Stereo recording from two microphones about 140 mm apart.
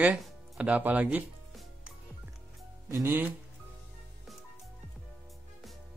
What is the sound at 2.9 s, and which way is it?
Speech, 15° right (ahead or behind).